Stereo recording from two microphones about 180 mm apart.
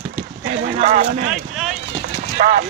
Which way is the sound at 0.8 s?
40° right (ahead or behind).